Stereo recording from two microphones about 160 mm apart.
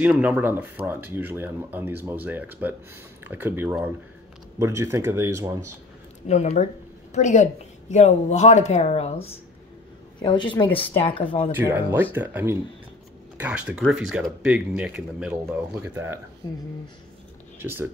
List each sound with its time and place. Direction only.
0.0 s speech: 10° right (ahead or behind)
6.2 s a woman's voice: 45° left (ahead or behind); by 10.5 s 30° left (ahead or behind)
10.7 s speech: 10° left (ahead or behind)
11.1 s speech: 35° left (ahead or behind)
11.5 s speech: 15° right (ahead or behind)
17.6 s speech: 15° right (ahead or behind)